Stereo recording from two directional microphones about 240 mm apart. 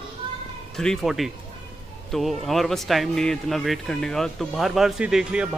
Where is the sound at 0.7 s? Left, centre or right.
Centre.